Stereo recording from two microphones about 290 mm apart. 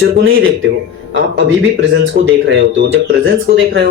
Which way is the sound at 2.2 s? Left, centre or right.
Right.